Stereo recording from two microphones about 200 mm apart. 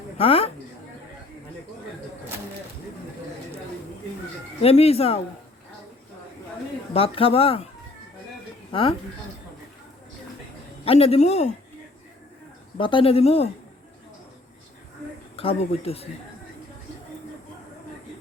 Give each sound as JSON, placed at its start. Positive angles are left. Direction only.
{"t": 0.2, "sound": "speech", "side_deg": 30}
{"t": 4.6, "sound": "a man's voice", "side_deg": 30}
{"t": 6.9, "sound": "speech", "side_deg": 30}
{"t": 8.7, "sound": "speech", "side_deg": 25}
{"t": 10.8, "sound": "a man's voice", "side_deg": 30}
{"t": 12.7, "sound": "speech", "side_deg": 25}
{"t": 15.4, "sound": "speech", "side_deg": 30}